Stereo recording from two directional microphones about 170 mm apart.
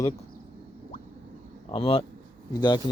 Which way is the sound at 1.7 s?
35° left (ahead or behind).